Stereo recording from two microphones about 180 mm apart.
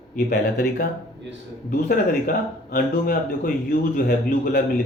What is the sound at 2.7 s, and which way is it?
Speech, 55° left (ahead or behind).